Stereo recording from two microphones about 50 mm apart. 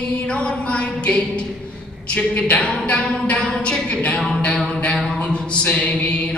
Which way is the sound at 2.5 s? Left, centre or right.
Left.